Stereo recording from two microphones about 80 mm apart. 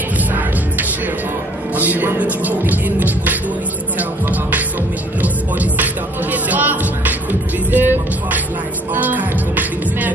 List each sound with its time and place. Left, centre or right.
1.8 s music: right